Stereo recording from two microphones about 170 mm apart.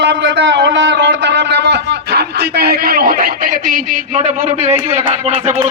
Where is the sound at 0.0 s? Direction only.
85° right.